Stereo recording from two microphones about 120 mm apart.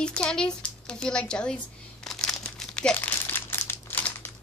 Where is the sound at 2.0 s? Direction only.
5° left (ahead or behind).